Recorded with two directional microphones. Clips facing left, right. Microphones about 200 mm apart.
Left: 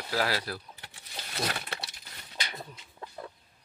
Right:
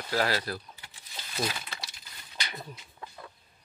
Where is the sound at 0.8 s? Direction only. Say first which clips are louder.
Left 3 dB; 65° left (ahead or behind).